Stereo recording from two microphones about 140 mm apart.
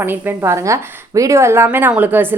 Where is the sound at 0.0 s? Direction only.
15° right (ahead or behind).